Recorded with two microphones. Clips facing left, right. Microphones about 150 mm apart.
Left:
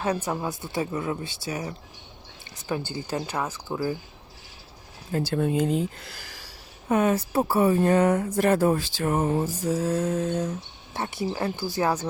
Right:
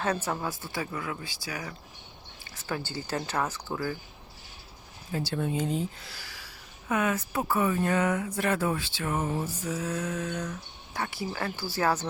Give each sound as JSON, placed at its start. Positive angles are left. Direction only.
{"t": 0.0, "sound": "speech", "side_deg": 15}
{"t": 5.1, "sound": "speech", "side_deg": 50}
{"t": 6.8, "sound": "speech", "side_deg": 35}